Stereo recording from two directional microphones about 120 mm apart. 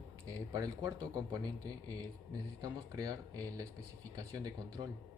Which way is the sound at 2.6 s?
30° right (ahead or behind).